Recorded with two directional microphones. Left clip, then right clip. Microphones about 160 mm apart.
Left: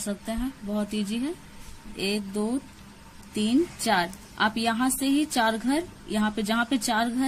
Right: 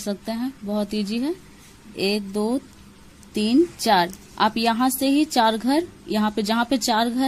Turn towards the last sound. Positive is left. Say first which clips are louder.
# right 5 dB
turn(degrees=-35)  # may be behind; listen again after turning